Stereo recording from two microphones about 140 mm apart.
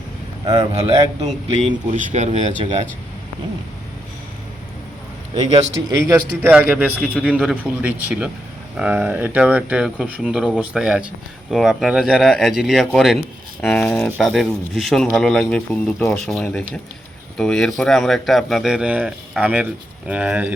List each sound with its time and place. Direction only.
0.4 s speech: 35° right (ahead or behind)
0.7 s speech: 50° right (ahead or behind)
6.4 s speech: 10° right (ahead or behind)